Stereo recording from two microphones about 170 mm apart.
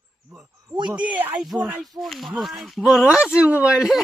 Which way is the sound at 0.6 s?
25° right (ahead or behind).